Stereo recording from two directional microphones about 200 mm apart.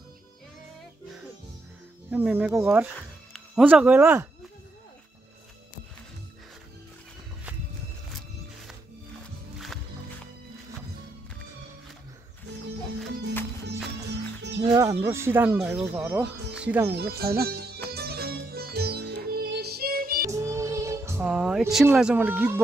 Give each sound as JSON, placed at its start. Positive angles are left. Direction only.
{"t": 2.0, "sound": "speech", "side_deg": -10}
{"t": 14.6, "sound": "speech", "side_deg": -20}
{"t": 16.9, "sound": "speech", "side_deg": -50}
{"t": 17.9, "sound": "music", "side_deg": -55}
{"t": 20.2, "sound": "music", "side_deg": -15}